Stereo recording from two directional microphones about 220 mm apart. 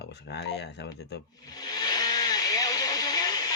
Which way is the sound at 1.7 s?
20° left (ahead or behind).